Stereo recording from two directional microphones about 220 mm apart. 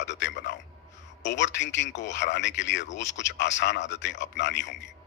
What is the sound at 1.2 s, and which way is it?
A man's voice, 55° left (ahead or behind).